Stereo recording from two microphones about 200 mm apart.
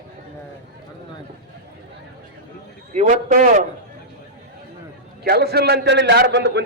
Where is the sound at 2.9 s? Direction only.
35° right (ahead or behind).